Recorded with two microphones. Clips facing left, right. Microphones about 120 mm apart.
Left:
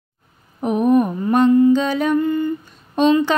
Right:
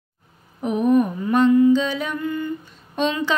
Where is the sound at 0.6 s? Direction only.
45° left (ahead or behind).